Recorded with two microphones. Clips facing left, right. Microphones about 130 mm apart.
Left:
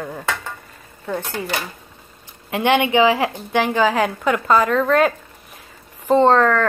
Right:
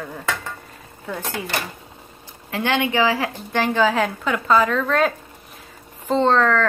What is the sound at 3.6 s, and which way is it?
A woman's voice, 5° left (ahead or behind).